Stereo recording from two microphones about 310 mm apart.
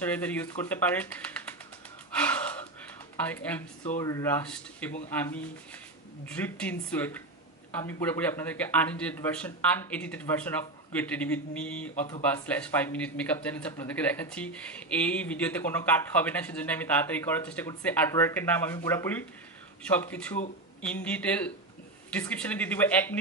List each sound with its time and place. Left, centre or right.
0.0 s speech: centre
3.3 s speech: centre
6.2 s speech: centre